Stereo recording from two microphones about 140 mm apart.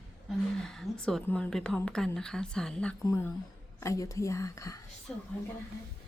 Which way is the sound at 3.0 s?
20° left (ahead or behind).